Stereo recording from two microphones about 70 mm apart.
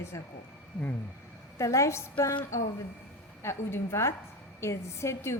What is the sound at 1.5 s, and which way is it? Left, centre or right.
A woman's voice, left.